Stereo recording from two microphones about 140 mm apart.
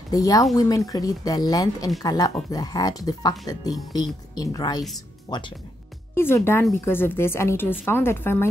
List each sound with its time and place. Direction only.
0.1 s speech: 25° left (ahead or behind)
6.1 s a woman's voice: 20° left (ahead or behind)